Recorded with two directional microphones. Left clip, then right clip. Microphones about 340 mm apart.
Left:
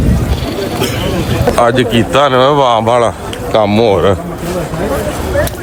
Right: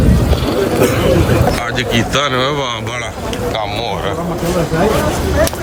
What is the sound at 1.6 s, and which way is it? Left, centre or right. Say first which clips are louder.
A man's voice: left 6 dB; centre.